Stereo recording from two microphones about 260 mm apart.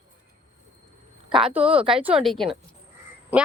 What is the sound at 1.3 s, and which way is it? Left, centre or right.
Speech, centre.